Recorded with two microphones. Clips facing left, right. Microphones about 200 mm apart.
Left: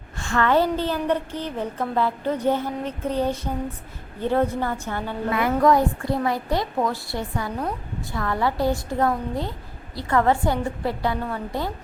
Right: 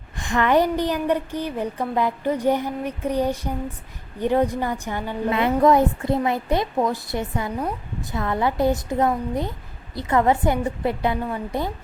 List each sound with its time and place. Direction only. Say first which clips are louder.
0.2 s a woman's voice: right 1 dB; 15° right (ahead or behind)